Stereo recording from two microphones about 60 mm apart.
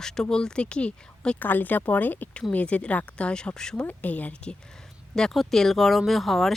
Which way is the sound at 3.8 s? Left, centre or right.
Left.